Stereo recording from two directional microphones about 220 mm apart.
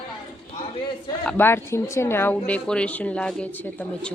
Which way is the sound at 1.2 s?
10° left (ahead or behind).